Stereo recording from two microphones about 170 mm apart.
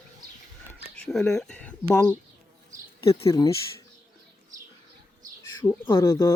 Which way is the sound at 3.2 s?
20° left (ahead or behind).